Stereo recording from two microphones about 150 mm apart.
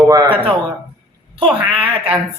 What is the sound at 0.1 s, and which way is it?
Speech, 30° right (ahead or behind).